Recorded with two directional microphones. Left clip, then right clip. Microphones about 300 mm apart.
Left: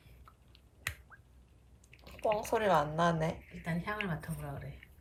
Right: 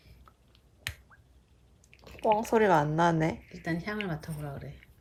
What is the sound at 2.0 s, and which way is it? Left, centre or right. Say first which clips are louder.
Speech: right 6 dB; right.